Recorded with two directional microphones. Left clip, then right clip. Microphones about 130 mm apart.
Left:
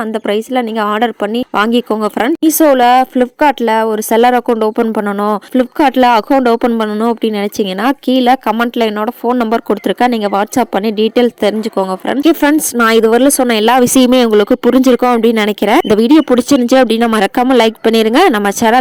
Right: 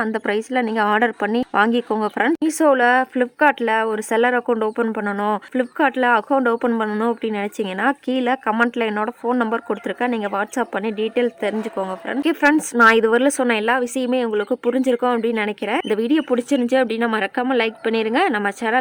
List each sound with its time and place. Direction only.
0.0 s a woman's voice: 30° left (ahead or behind); by 7.5 s 50° left (ahead or behind)
7.8 s a woman's voice: 40° left (ahead or behind)
13.5 s speech: 65° left (ahead or behind)